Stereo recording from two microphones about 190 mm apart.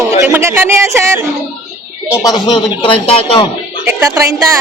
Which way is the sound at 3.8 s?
15° right (ahead or behind).